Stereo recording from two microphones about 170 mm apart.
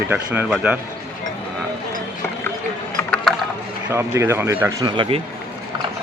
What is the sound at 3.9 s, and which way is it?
Speech, 15° right (ahead or behind).